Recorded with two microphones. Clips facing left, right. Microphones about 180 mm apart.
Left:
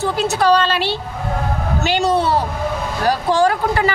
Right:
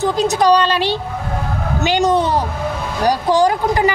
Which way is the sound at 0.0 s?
15° right (ahead or behind).